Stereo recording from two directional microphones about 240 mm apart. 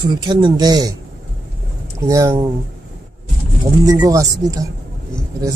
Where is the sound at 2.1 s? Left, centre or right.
Centre.